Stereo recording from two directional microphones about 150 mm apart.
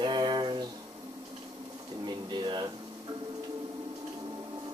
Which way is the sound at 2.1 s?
30° right (ahead or behind).